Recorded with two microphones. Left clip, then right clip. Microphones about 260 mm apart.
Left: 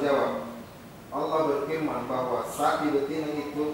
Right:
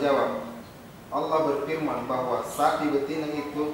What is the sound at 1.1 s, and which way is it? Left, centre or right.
A man's voice, centre.